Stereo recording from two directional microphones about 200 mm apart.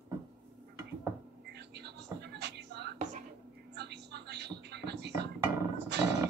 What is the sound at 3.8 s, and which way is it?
Television, 55° right (ahead or behind).